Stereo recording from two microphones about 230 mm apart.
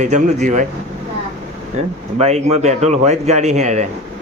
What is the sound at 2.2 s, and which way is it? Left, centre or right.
Speech, right.